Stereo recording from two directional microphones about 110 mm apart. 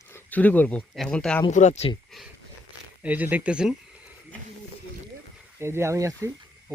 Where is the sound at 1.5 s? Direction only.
90° left.